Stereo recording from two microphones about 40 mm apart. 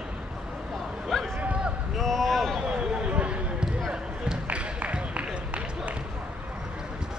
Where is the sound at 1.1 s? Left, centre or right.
Centre.